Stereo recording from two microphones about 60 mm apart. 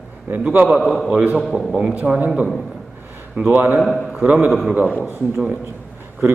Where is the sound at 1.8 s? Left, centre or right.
Centre.